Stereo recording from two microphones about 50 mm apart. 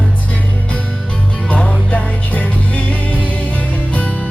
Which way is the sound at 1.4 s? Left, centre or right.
Left.